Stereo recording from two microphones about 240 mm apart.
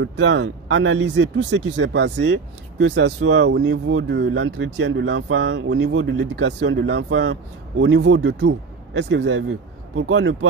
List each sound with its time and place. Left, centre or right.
0.0 s speech: right